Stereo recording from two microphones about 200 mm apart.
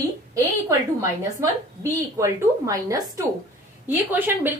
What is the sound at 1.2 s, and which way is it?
A woman's voice, 15° right (ahead or behind).